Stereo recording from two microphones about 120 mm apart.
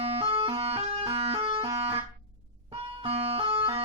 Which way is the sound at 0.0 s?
55° right (ahead or behind).